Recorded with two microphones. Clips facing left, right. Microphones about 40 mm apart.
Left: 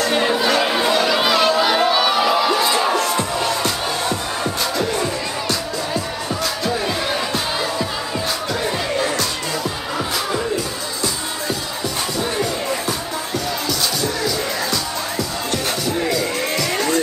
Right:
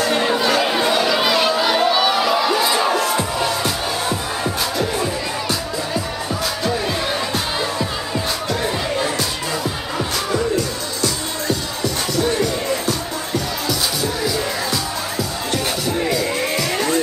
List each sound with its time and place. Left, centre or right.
0.1 s chatter: centre
4.7 s music: centre
12.2 s music: centre
15.5 s music: centre